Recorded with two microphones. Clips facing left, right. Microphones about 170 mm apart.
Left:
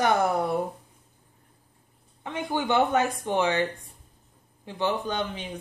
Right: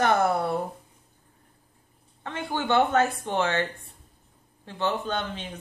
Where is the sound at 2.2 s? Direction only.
15° left (ahead or behind).